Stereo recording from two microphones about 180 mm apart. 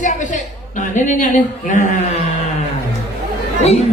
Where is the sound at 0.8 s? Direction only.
45° left (ahead or behind).